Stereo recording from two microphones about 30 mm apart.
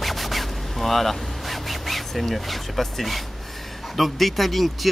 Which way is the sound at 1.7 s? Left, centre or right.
Centre.